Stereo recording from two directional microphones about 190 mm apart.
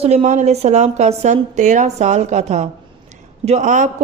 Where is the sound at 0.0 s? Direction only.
35° right (ahead or behind).